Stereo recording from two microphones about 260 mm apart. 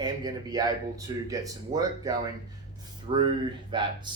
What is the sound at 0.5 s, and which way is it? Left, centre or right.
Speech, centre.